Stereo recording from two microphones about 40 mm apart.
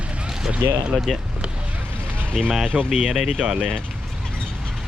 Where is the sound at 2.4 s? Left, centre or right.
Centre.